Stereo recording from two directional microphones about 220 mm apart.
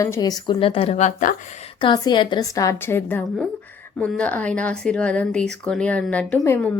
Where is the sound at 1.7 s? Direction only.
20° left (ahead or behind).